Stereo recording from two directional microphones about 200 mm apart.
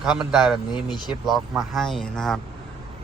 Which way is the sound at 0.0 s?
5° right (ahead or behind).